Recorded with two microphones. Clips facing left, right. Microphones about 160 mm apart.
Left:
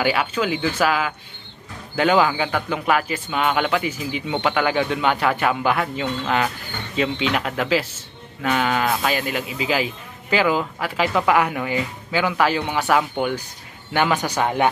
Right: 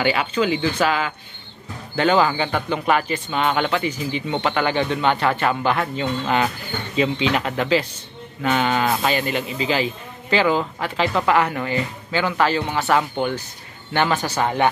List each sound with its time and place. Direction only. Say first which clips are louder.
0.0 s a man's voice: right 1 dB; 5° left (ahead or behind)